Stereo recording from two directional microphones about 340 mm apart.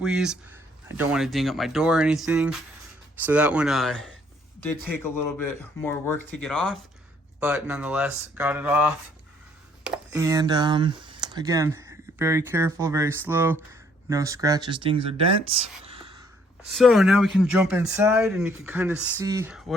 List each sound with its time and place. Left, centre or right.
0.0 s speech: centre
15.8 s whispering: centre
16.7 s speech: centre